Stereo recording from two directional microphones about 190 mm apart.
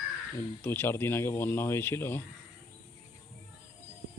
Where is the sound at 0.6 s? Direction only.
10° left (ahead or behind).